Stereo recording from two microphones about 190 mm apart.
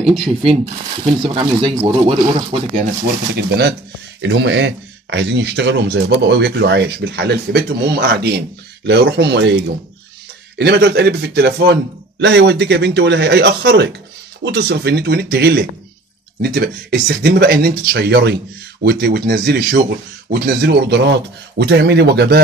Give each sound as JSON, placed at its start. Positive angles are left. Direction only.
{"t": 0.0, "sound": "speech", "side_deg": 0}
{"t": 1.2, "sound": "speech", "side_deg": -25}
{"t": 3.3, "sound": "a man's voice", "side_deg": -55}
{"t": 4.2, "sound": "a man's voice", "side_deg": -70}
{"t": 10.6, "sound": "a man's voice", "side_deg": -60}